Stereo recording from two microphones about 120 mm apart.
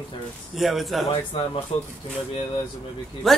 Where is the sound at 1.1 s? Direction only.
50° left (ahead or behind).